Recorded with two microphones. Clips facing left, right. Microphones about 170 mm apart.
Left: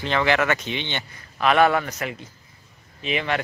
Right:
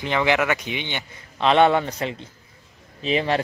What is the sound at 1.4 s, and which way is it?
A man's voice, 25° right (ahead or behind).